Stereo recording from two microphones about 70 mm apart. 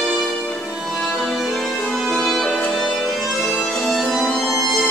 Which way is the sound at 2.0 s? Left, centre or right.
Centre.